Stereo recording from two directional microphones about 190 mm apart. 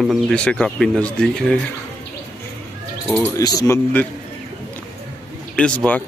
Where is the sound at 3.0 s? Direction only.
5° left (ahead or behind).